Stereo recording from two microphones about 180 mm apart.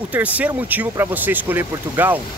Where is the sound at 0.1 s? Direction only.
10° right (ahead or behind).